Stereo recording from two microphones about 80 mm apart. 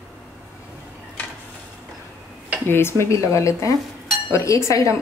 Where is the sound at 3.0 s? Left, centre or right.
Left.